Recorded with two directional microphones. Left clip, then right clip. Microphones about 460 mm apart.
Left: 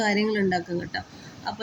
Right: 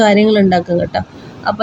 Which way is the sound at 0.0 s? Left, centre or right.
Left.